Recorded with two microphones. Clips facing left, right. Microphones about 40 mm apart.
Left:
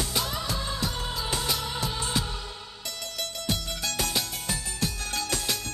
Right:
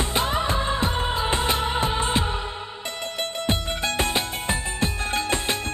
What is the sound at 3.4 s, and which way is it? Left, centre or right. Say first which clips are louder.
Music: right 6 dB; right.